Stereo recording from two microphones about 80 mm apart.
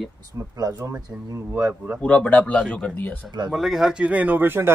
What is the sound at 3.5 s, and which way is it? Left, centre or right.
A man's voice, centre.